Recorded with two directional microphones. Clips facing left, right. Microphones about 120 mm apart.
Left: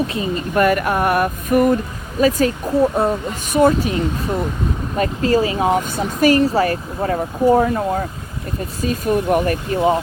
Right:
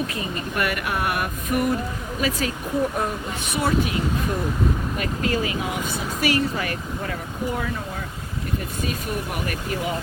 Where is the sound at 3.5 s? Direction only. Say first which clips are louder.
Left 8 dB; 40° left (ahead or behind).